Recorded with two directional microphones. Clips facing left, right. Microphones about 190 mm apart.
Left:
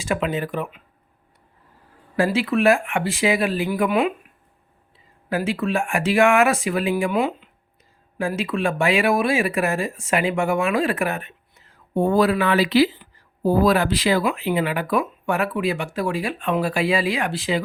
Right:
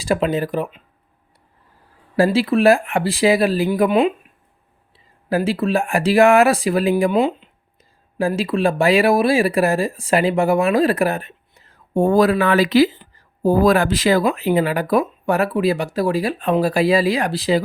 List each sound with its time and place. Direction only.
0.0 s speech: 35° right (ahead or behind)
2.1 s speech: 35° right (ahead or behind)
5.3 s speech: 35° right (ahead or behind)